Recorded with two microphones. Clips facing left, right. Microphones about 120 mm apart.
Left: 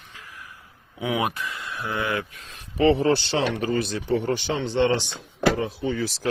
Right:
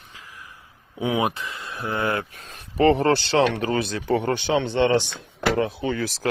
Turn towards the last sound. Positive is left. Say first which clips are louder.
# even
turn(degrees=-50)  # may be behind; listen again after turning